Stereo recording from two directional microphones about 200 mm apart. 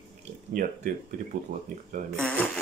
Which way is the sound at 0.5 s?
40° right (ahead or behind).